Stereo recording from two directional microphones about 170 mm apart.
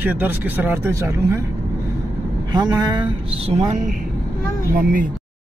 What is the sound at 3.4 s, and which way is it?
Speech, 45° right (ahead or behind).